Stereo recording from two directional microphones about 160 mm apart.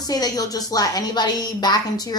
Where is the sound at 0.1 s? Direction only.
25° left (ahead or behind).